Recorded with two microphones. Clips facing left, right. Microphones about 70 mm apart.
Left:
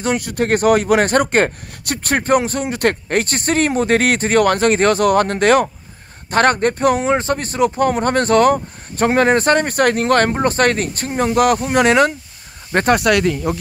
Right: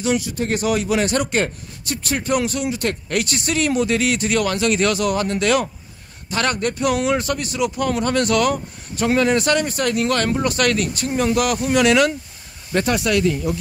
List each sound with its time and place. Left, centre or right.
0.0 s speech: left
2.7 s speech: left
3.1 s speech: left
12.7 s speech: left